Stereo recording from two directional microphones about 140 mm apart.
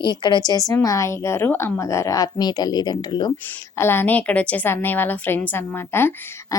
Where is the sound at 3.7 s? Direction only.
15° left (ahead or behind).